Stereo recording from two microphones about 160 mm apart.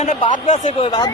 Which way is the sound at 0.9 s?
25° left (ahead or behind).